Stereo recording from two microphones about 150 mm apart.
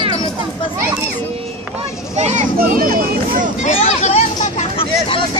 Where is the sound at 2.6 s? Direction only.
75° right (ahead or behind).